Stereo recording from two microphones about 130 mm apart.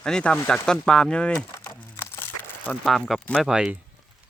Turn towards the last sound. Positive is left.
turn(degrees=-5)  # may be behind; listen again after turning